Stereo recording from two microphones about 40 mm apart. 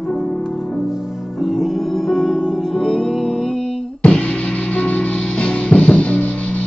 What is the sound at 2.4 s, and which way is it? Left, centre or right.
Music, centre.